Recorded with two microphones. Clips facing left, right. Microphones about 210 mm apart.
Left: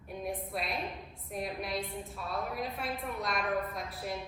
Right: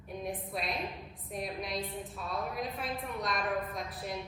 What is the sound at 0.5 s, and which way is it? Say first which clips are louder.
A woman's voice: even; centre (ahead or behind).